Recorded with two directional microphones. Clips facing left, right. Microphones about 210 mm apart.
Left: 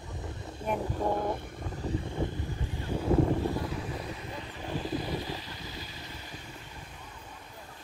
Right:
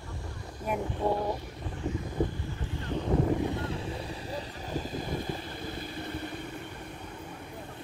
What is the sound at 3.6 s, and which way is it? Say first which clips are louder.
Boat: right 1 dB; 30° right (ahead or behind).